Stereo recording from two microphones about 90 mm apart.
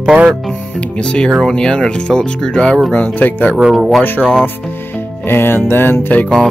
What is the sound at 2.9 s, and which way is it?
Music, 20° left (ahead or behind).